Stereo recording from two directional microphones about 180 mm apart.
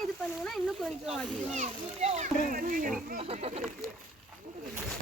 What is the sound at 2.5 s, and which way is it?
Speech, 50° right (ahead or behind).